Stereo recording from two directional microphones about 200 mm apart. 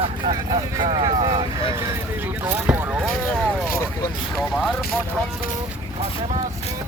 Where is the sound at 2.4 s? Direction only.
10° right (ahead or behind).